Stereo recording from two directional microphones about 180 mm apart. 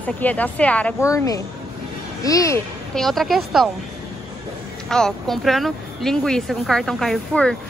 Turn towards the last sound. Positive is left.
turn(degrees=5)  # may be behind; listen again after turning